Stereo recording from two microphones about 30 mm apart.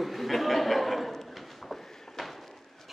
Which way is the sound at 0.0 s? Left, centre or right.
Centre.